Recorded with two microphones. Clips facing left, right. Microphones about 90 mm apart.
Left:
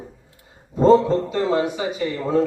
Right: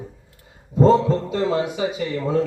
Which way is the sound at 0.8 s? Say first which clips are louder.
Left 2 dB; 35° left (ahead or behind).